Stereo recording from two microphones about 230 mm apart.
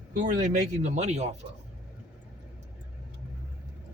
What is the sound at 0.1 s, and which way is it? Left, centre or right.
Speech, right.